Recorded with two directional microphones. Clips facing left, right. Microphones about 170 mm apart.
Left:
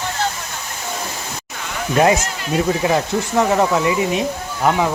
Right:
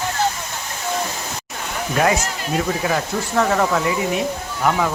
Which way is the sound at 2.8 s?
20° left (ahead or behind).